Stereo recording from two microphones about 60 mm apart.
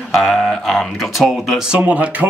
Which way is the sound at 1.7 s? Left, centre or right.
Right.